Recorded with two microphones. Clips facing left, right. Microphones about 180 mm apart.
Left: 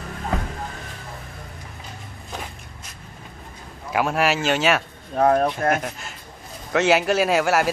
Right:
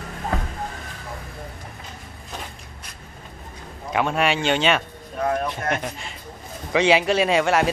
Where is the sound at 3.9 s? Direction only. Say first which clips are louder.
Even; 5° left (ahead or behind).